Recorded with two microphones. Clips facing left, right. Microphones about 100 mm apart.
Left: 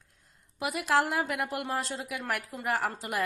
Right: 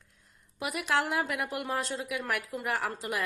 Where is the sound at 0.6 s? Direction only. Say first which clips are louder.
Left 3 dB; 35° left (ahead or behind).